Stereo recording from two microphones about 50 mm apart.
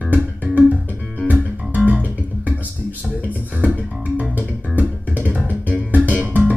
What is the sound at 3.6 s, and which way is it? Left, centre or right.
Bass guitar, right.